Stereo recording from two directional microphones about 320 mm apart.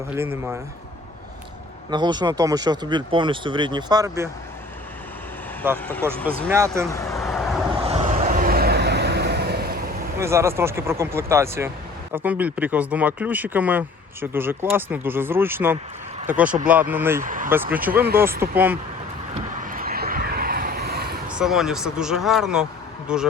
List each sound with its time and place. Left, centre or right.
0.2 s speech: centre
1.9 s speech: centre
5.6 s speech: centre
6.5 s speech: centre
6.9 s vehicle: centre
7.8 s vehicle: centre
10.2 s speech: centre
17.2 s speech: right
17.5 s speech: centre
19.3 s vehicle: right
21.2 s speech: centre